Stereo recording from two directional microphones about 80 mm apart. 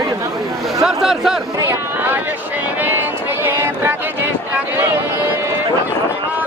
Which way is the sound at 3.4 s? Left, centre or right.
Right.